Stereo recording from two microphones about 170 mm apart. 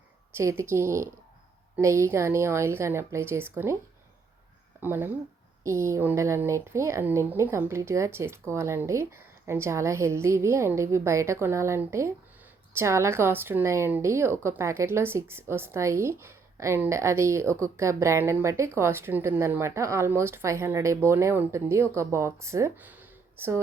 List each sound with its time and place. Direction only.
0.3 s speech: 15° right (ahead or behind)
4.8 s speech: 10° right (ahead or behind)